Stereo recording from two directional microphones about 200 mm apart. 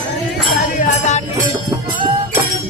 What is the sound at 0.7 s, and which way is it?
Music, 35° left (ahead or behind).